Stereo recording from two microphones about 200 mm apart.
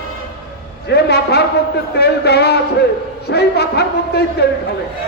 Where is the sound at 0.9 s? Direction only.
55° left (ahead or behind).